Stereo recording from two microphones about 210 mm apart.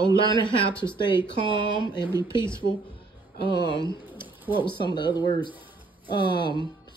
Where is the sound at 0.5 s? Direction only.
25° left (ahead or behind).